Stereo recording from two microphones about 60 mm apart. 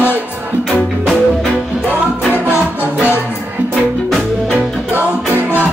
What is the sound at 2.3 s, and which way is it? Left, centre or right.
Music, right.